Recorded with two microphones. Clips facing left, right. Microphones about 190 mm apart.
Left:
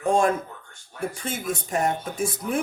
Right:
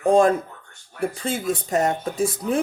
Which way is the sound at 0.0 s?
35° right (ahead or behind).